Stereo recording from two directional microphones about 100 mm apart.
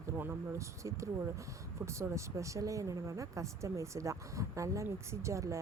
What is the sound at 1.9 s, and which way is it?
Speech, 30° right (ahead or behind).